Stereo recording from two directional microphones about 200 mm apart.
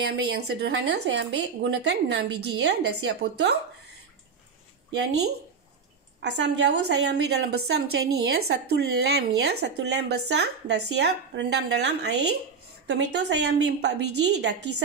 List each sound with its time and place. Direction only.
0.1 s a woman's voice: 55° right (ahead or behind)
4.9 s a woman's voice: 60° right (ahead or behind)